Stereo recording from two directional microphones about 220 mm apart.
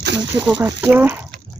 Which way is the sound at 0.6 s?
10° right (ahead or behind).